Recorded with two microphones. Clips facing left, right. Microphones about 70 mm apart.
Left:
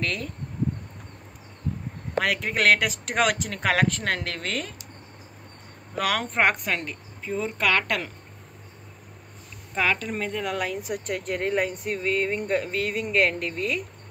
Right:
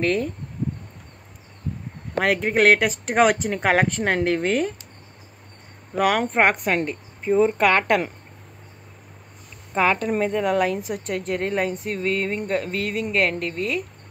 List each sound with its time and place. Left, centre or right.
0.0 s a woman's voice: centre
2.1 s speech: right
5.9 s a woman's voice: centre
6.8 s speech: right
7.5 s a woman's voice: centre
9.8 s a woman's voice: right; by 10.8 s centre
11.1 s speech: centre